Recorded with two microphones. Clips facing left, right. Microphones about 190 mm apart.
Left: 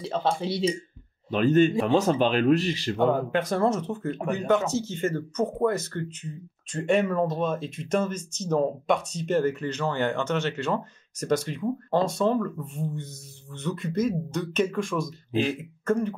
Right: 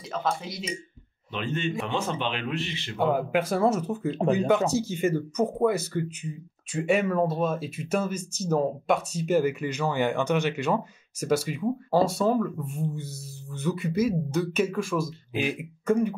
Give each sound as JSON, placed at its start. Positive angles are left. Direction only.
{"t": 0.0, "sound": "speech", "side_deg": 30}
{"t": 1.3, "sound": "speech", "side_deg": 40}
{"t": 3.0, "sound": "speech", "side_deg": -10}